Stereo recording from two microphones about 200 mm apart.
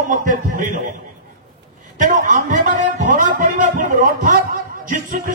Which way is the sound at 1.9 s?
40° right (ahead or behind).